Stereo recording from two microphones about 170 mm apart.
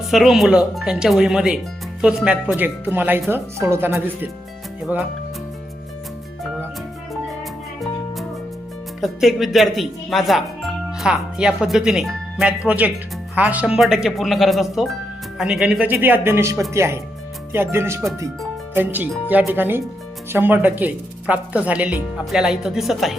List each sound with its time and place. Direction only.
0.1 s speech: centre (ahead or behind)
9.0 s speech: centre (ahead or behind)